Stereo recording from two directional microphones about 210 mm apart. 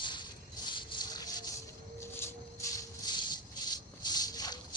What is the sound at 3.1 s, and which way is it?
Music, 20° left (ahead or behind).